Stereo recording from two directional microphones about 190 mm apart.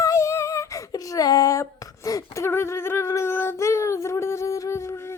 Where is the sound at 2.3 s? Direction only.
15° left (ahead or behind).